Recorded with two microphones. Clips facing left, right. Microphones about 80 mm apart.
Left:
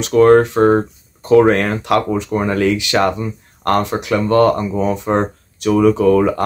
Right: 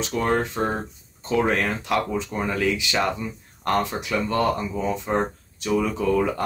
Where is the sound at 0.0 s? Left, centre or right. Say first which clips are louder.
Left 13 dB; left.